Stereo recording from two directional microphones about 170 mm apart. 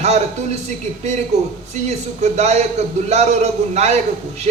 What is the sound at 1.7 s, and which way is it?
A man's voice, 40° right (ahead or behind).